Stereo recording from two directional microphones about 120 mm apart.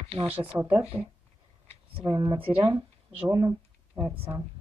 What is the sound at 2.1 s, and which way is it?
Speech, 40° right (ahead or behind).